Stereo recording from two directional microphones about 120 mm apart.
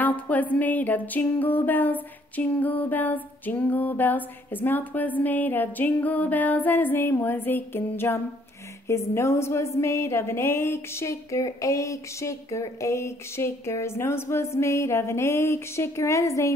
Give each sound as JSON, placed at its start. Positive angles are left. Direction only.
{"t": 0.0, "sound": "music", "side_deg": 15}
{"t": 8.8, "sound": "a woman's voice", "side_deg": 25}